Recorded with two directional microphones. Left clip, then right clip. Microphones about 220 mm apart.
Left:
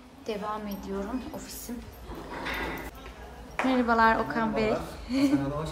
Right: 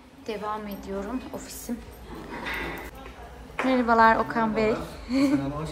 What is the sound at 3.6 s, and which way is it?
A woman's voice, 10° left (ahead or behind).